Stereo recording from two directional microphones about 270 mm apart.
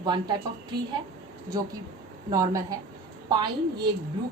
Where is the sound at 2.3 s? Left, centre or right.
Centre.